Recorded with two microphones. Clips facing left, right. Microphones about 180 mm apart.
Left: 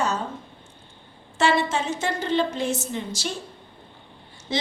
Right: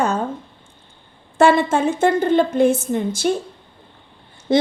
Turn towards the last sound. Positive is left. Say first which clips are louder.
# right 11 dB
turn(degrees=-55)  # may be behind; listen again after turning